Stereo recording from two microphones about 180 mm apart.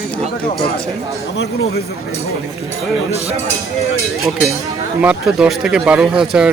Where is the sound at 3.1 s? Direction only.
35° right (ahead or behind).